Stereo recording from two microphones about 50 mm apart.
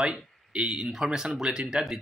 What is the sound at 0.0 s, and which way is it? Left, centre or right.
Speech, right.